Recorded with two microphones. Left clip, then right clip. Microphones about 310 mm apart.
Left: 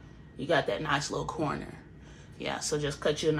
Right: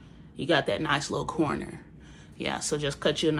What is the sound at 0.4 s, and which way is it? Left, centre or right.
Speech, right.